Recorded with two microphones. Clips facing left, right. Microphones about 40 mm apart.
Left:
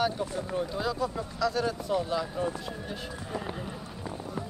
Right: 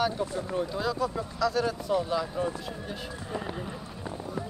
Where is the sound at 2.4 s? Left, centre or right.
Centre.